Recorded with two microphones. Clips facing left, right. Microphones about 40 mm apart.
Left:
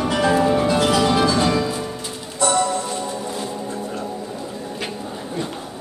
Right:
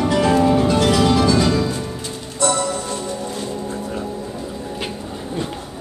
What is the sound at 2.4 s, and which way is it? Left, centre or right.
Music, centre.